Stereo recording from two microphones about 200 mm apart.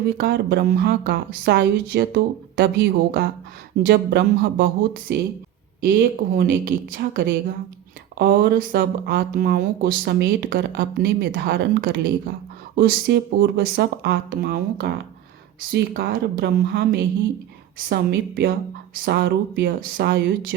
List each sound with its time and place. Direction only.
0.2 s a woman's voice: 55° right (ahead or behind)